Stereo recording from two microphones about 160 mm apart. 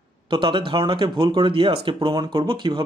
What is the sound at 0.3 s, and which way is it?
Speech, 30° right (ahead or behind).